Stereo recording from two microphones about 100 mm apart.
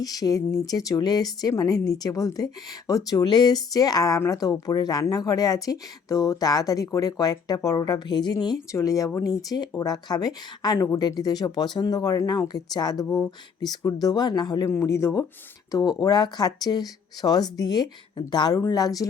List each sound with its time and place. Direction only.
0.0 s a woman's voice: 40° left (ahead or behind)
8.7 s a woman's voice: 35° left (ahead or behind)
14.6 s a woman's voice: 30° left (ahead or behind)
15.7 s a woman's voice: 40° left (ahead or behind)